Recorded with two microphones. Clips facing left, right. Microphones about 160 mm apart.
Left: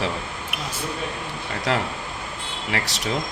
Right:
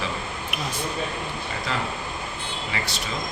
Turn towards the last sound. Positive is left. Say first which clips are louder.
# left 3 dB
turn(degrees=85)